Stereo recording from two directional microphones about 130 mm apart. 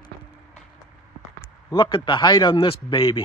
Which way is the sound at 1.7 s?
35° left (ahead or behind).